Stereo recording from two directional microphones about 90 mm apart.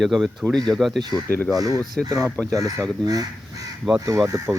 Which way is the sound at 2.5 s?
40° right (ahead or behind).